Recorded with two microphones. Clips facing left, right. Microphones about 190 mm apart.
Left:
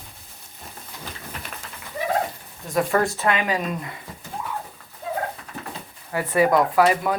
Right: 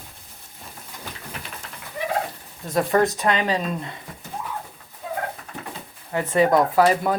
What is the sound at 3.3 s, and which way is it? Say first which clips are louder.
Speech: right 1 dB; 30° right (ahead or behind).